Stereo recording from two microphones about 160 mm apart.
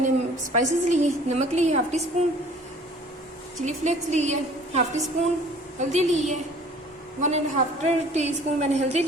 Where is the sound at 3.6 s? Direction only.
50° right (ahead or behind).